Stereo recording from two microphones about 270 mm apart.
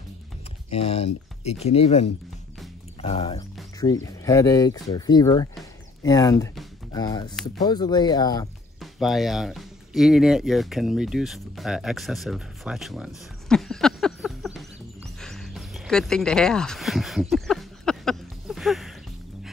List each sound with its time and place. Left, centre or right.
0.7 s speech: left
9.0 s speech: centre
15.1 s a sound: centre